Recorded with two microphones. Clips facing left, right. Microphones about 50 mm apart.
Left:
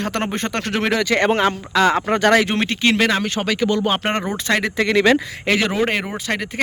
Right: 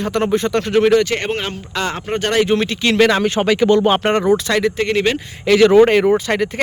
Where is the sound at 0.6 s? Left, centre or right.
Left.